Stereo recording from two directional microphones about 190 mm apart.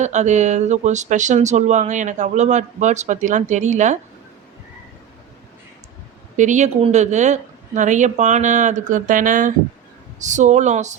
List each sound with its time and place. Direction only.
0.0 s speech: 40° right (ahead or behind)
6.3 s speech: 40° right (ahead or behind)